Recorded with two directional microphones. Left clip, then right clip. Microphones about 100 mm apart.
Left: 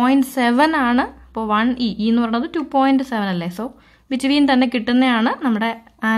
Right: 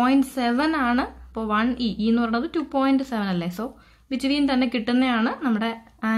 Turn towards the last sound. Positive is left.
turn(degrees=25)  # may be behind; listen again after turning